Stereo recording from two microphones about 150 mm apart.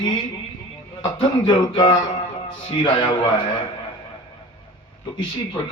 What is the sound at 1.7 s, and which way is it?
Speech, 30° left (ahead or behind).